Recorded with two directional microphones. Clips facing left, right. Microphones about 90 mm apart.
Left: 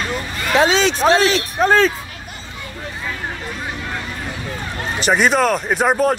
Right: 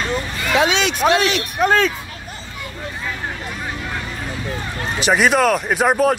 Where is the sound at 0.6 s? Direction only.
35° left (ahead or behind).